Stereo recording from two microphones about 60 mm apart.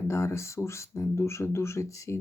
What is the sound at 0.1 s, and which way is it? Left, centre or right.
Speech, left.